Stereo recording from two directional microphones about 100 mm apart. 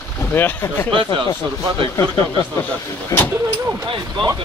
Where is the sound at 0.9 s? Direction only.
55° right (ahead or behind).